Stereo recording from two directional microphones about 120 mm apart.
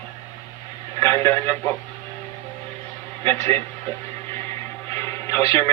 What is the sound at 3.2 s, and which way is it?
Speech, 20° left (ahead or behind).